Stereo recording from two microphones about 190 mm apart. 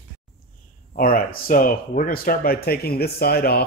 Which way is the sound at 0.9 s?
45° left (ahead or behind).